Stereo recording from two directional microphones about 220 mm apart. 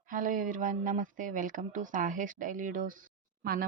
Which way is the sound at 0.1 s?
35° right (ahead or behind).